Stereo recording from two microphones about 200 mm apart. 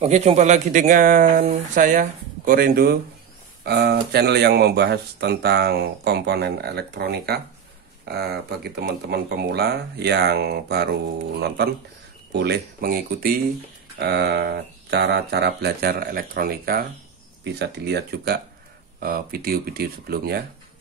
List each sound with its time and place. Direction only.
0.0 s speech: 35° right (ahead or behind); by 20.4 s 50° right (ahead or behind)